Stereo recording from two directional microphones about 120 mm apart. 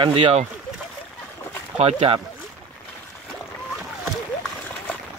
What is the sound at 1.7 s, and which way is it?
Speech, 65° right (ahead or behind).